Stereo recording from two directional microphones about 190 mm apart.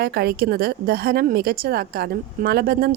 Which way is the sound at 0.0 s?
55° right (ahead or behind).